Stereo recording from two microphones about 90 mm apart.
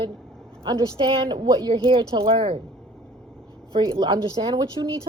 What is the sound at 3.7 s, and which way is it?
Speech, 55° right (ahead or behind).